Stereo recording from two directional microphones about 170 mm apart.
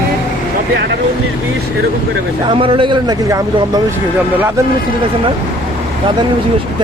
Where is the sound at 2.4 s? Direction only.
30° right (ahead or behind); by 4.6 s 10° right (ahead or behind).